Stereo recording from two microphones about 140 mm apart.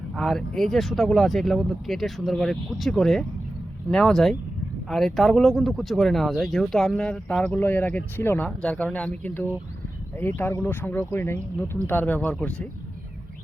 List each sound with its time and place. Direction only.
0.2 s speech: 5° left (ahead or behind)